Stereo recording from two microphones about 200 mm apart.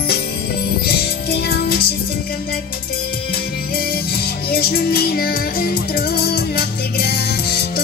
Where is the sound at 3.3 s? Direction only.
50° left (ahead or behind).